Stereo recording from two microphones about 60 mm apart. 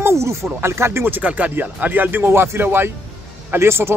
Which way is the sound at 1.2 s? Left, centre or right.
Right.